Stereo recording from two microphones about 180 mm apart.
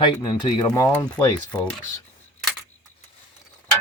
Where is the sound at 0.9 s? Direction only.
10° left (ahead or behind).